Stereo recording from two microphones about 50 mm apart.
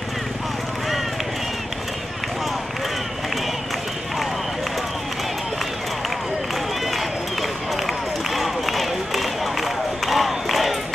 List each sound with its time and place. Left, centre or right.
8.4 s run: centre